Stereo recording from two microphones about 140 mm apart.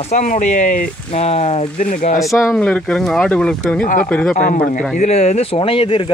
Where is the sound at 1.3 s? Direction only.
50° left (ahead or behind).